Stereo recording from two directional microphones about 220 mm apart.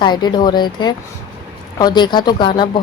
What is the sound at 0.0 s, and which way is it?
Speech, 20° left (ahead or behind).